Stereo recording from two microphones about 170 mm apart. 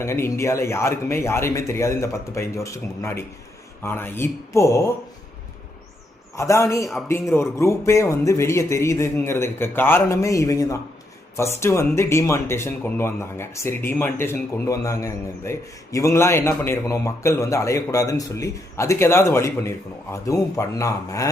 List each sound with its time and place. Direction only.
0.0 s speech: 15° left (ahead or behind)
6.3 s speech: 15° left (ahead or behind)